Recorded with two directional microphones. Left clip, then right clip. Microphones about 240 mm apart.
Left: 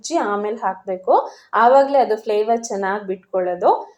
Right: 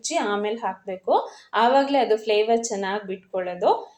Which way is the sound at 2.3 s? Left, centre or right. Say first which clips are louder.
Left 2 dB; left.